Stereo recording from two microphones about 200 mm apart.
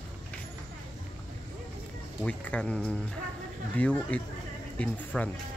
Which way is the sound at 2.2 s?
5° left (ahead or behind).